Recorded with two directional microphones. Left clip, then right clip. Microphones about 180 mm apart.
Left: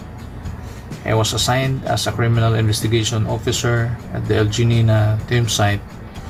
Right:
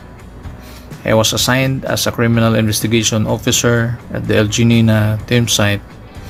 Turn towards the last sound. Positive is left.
turn(degrees=-45)  # may be behind; listen again after turning